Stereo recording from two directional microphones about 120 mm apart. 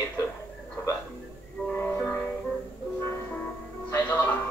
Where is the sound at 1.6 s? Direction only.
15° left (ahead or behind).